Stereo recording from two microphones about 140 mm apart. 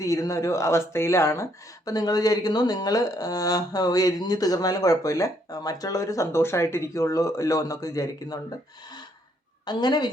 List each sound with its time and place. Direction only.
0.0 s speech: 25° left (ahead or behind)
9.6 s a woman's voice: 30° left (ahead or behind)